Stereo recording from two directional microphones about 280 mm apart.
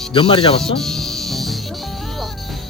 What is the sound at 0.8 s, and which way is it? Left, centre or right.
Music, centre.